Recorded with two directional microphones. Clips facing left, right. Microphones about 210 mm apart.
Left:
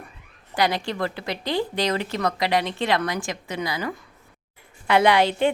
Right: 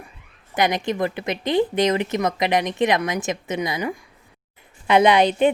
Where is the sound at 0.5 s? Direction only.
20° right (ahead or behind).